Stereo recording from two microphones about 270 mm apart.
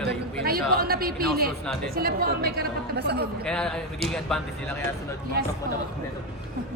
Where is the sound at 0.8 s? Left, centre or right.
Right.